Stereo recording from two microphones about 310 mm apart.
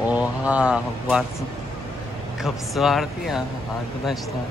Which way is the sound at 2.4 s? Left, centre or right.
Centre.